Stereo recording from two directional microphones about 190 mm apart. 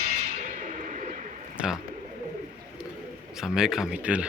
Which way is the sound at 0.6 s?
40° right (ahead or behind).